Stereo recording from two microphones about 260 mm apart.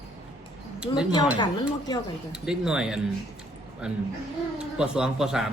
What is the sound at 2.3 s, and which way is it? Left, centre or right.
Speech, centre.